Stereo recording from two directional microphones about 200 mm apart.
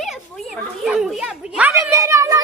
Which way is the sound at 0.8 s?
Centre (ahead or behind).